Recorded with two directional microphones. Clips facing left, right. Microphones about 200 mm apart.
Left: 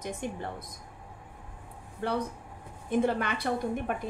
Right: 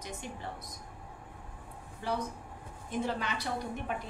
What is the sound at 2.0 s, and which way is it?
A woman's voice, 60° left (ahead or behind).